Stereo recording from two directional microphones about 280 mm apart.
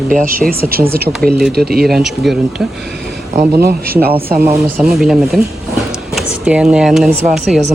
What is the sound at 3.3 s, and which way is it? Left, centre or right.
Speech, right.